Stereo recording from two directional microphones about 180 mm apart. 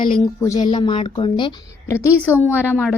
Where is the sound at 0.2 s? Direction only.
20° left (ahead or behind).